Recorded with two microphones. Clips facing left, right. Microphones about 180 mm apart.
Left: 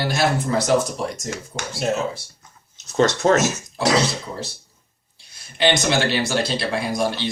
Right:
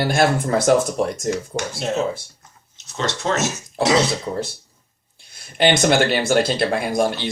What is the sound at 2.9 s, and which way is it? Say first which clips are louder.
Speech: left 6 dB; 50° left (ahead or behind).